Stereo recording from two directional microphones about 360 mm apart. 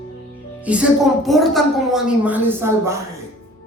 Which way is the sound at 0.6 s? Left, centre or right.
Centre.